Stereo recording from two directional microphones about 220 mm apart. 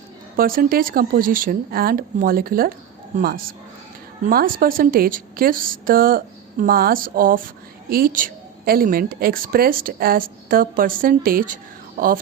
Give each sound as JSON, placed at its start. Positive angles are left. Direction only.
{"t": 0.3, "sound": "a woman's voice", "side_deg": -40}